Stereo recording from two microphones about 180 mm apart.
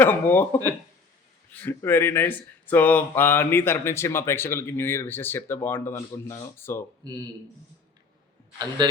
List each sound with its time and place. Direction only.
0.0 s speech: 10° left (ahead or behind)
8.8 s speech: 25° right (ahead or behind)